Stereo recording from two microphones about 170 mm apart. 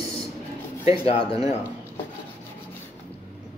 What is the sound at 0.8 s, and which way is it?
Speech, 35° left (ahead or behind).